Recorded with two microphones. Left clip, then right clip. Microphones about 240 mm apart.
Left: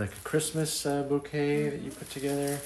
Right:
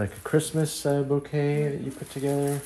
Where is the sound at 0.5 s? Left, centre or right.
Right.